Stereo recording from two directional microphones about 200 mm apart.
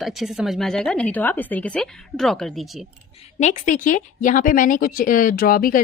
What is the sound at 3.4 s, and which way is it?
Speech, 40° left (ahead or behind).